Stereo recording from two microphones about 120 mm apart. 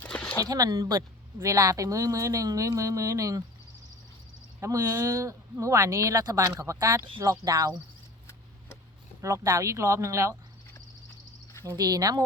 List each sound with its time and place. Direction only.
0.0 s a sound: 10° left (ahead or behind)
0.4 s speech: 30° right (ahead or behind)
4.6 s speech: 30° right (ahead or behind)
9.2 s speech: 25° right (ahead or behind)
11.6 s speech: 25° right (ahead or behind)